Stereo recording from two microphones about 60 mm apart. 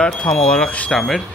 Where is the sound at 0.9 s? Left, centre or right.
Centre.